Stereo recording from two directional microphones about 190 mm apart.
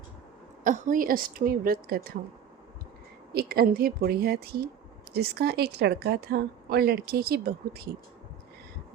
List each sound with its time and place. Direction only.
0.6 s a woman's voice: 45° right (ahead or behind)
3.3 s a woman's voice: 55° right (ahead or behind)